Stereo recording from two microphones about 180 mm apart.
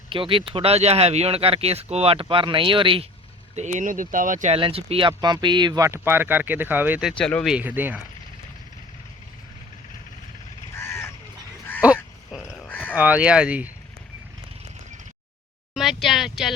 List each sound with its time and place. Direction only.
0.1 s speech: 30° right (ahead or behind)
3.5 s speech: 40° right (ahead or behind)
4.5 s speech: 30° right (ahead or behind); by 7.1 s 10° right (ahead or behind)
7.1 s speech: 5° left (ahead or behind)
7.5 s speech: 10° right (ahead or behind)
10.8 s crow: 15° left (ahead or behind)
11.8 s speech: 10° right (ahead or behind)
12.5 s a sound: 10° left (ahead or behind)
12.9 s speech: 10° right (ahead or behind)
15.7 s speech: centre (ahead or behind)